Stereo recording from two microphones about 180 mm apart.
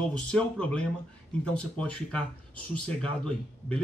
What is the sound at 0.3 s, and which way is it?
A man's voice, 5° left (ahead or behind).